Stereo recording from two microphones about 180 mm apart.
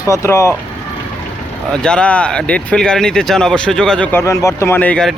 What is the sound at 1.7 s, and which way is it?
Speech, 5° left (ahead or behind).